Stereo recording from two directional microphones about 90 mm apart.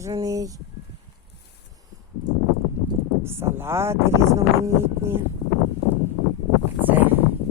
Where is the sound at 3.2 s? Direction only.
25° right (ahead or behind).